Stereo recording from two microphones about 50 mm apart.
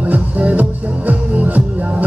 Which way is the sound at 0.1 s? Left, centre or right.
Right.